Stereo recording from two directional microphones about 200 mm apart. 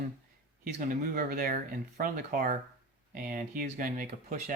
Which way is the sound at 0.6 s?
45° right (ahead or behind).